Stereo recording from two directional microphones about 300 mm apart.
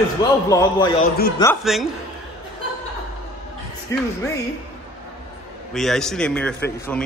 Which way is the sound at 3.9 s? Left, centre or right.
Centre.